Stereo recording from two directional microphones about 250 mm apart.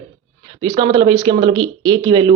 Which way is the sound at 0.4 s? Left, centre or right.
Centre.